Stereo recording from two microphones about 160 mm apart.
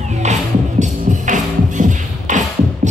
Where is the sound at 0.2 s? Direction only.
45° right (ahead or behind).